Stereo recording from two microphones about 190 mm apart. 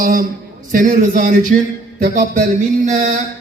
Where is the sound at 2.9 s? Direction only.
40° right (ahead or behind).